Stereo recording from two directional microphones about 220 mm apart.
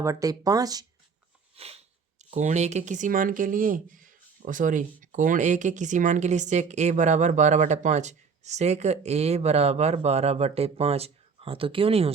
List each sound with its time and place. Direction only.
0.0 s speech: 15° right (ahead or behind)
1.5 s a sound: 30° right (ahead or behind)
2.3 s speech: 30° right (ahead or behind)